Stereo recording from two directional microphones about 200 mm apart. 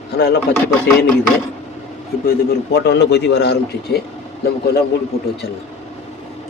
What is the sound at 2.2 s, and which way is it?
A man's voice, 55° left (ahead or behind).